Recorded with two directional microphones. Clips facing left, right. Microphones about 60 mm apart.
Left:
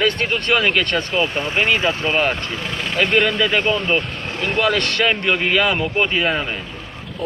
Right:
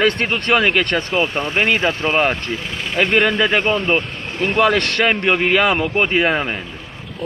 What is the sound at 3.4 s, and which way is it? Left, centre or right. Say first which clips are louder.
A man's voice: right 2 dB; right.